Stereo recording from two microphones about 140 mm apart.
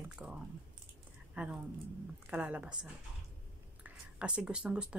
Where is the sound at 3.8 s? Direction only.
10° right (ahead or behind).